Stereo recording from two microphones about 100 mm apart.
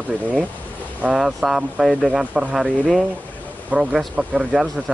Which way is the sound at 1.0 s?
5° right (ahead or behind).